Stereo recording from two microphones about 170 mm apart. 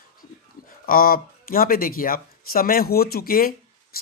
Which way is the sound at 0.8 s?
60° left (ahead or behind).